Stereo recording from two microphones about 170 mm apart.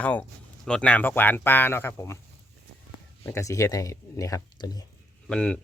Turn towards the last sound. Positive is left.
turn(degrees=5)  # may be behind; listen again after turning